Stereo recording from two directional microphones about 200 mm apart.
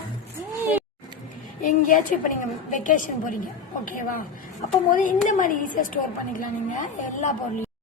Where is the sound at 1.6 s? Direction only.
40° left (ahead or behind).